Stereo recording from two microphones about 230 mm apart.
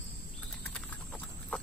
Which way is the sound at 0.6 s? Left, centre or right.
Centre.